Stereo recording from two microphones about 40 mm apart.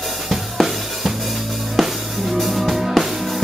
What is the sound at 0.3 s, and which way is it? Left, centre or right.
Drum, centre.